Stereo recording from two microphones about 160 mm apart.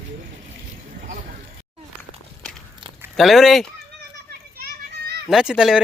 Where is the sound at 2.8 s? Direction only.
30° right (ahead or behind).